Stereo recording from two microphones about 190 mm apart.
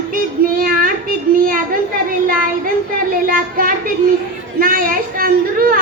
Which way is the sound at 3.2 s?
50° right (ahead or behind).